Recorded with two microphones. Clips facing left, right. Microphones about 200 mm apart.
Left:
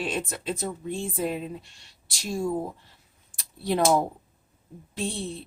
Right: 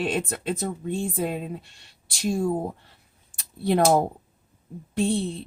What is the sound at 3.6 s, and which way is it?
Speech, 55° right (ahead or behind).